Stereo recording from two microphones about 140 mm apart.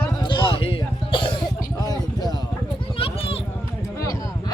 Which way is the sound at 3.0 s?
40° left (ahead or behind).